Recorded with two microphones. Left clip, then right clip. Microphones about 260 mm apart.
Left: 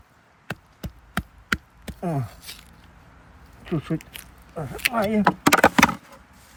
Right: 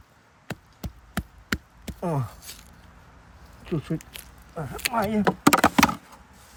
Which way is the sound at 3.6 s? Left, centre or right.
Centre.